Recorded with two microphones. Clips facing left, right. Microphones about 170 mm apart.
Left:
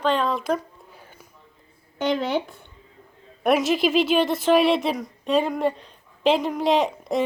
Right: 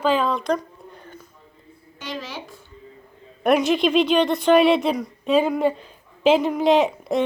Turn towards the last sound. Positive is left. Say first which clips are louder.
# right 3 dB
turn(degrees=0)  # may be behind; listen again after turning